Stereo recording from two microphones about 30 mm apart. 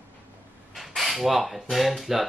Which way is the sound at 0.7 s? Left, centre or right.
Centre.